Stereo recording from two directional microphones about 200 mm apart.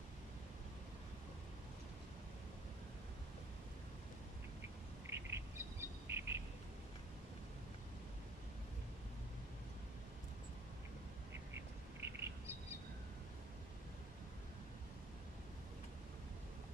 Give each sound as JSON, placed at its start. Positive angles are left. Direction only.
{"t": 5.1, "sound": "bird", "side_deg": -10}
{"t": 12.0, "sound": "bird", "side_deg": -10}